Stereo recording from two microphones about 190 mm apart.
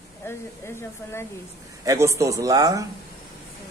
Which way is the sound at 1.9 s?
15° right (ahead or behind).